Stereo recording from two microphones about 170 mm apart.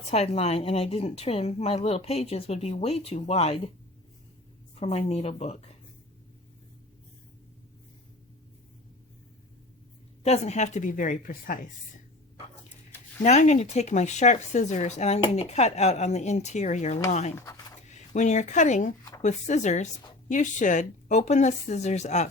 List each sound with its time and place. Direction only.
0.1 s speech: 40° left (ahead or behind)
4.7 s speech: 35° left (ahead or behind)
10.2 s a woman's voice: 40° left (ahead or behind)
13.2 s a woman's voice: 45° left (ahead or behind)
17.3 s speech: 20° left (ahead or behind)
17.8 s a woman's voice: 45° left (ahead or behind)